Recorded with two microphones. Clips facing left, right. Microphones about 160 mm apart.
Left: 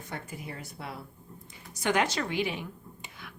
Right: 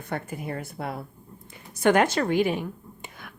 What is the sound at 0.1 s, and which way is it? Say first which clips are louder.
A woman's voice: right 9 dB; 55° right (ahead or behind).